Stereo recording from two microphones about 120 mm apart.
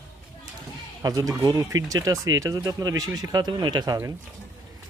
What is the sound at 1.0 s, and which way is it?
Speech, 30° right (ahead or behind).